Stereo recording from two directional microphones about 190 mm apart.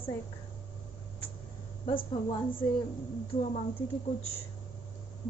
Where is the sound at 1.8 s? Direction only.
25° left (ahead or behind).